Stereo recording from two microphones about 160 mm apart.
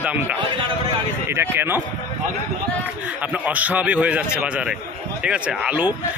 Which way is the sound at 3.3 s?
10° right (ahead or behind).